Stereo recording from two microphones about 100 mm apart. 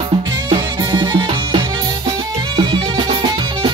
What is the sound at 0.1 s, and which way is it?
Music, 45° right (ahead or behind).